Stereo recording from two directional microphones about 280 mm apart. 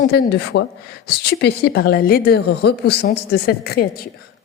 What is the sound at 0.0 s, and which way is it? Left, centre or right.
A woman's voice, left.